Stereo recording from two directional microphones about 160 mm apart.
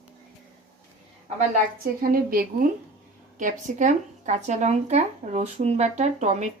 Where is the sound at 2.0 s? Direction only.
65° right (ahead or behind).